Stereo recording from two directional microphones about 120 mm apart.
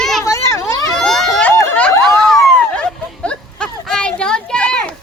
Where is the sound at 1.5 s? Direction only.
15° left (ahead or behind).